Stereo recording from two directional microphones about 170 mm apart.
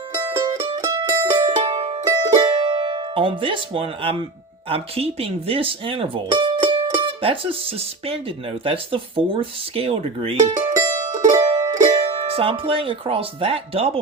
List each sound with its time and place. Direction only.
0.2 s music: 15° right (ahead or behind)
0.6 s mandolin: 35° right (ahead or behind)
0.9 s mandolin: 15° right (ahead or behind)
1.5 s music: 30° right (ahead or behind)
2.0 s music: 25° right (ahead or behind)
4.7 s speech: 35° right (ahead or behind)
10.8 s music: 20° right (ahead or behind)
12.1 s speech: 35° right (ahead or behind)